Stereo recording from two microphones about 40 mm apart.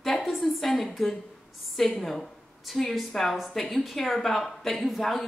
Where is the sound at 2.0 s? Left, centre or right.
Centre.